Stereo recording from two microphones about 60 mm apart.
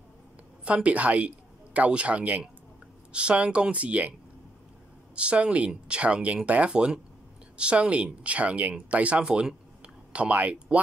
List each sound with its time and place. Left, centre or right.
0.8 s a man's voice: right
5.1 s speech: centre